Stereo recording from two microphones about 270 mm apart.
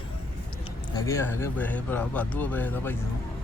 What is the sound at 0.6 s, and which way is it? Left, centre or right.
Speech, centre.